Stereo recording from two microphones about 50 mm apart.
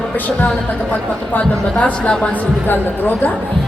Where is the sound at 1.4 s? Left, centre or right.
Left.